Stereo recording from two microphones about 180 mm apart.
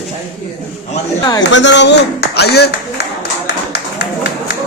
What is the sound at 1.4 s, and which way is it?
Clapping, 85° left.